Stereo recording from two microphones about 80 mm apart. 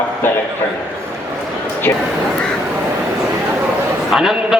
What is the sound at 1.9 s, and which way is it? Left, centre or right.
Speech, left.